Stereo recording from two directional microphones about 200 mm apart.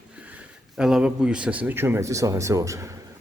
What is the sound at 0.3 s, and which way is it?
A man's voice, 5° right (ahead or behind).